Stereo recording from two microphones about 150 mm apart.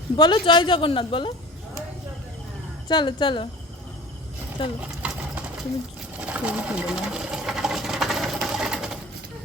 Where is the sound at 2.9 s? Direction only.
30° left (ahead or behind).